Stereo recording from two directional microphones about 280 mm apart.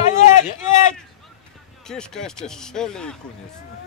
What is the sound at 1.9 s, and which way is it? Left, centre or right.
Speech, centre.